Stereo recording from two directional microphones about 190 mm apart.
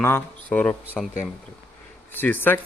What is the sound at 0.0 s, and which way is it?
Speech, 10° left (ahead or behind).